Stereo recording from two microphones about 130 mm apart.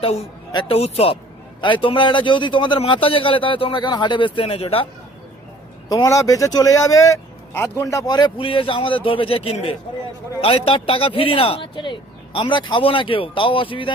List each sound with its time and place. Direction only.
0.0 s speech: 55° left (ahead or behind)
1.6 s speech: 40° left (ahead or behind)
5.9 s speech: 25° left (ahead or behind)